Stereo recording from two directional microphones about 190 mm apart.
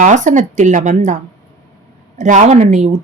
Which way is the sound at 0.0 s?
40° right (ahead or behind).